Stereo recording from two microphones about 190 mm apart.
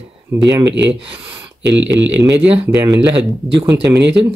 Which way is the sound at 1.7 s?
70° right (ahead or behind).